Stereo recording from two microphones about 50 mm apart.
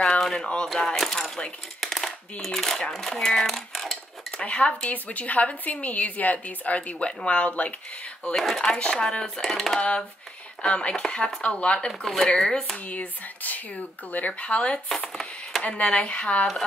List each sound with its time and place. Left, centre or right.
0.2 s speech: centre
1.8 s a sound: centre
2.4 s speech: centre
4.4 s a woman's voice: left
9.8 s a woman's voice: left
11.9 s speech: centre
12.7 s a woman's voice: left